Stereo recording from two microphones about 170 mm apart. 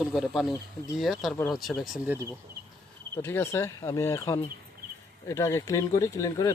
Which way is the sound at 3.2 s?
15° left (ahead or behind).